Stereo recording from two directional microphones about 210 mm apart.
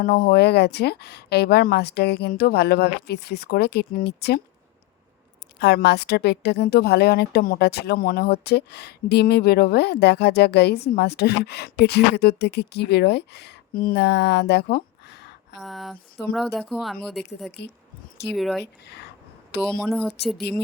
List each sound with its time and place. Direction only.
0.0 s a woman's voice: 45° left (ahead or behind)
5.5 s a woman's voice: 50° left (ahead or behind)
15.6 s speech: centre (ahead or behind)
18.6 s a woman's voice: 50° left (ahead or behind)
19.8 s speech: centre (ahead or behind)